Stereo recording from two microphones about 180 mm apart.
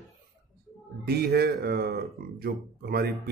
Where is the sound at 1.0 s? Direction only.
60° right (ahead or behind).